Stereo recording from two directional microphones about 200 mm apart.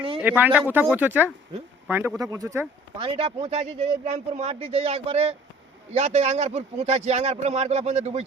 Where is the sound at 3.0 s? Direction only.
30° right (ahead or behind).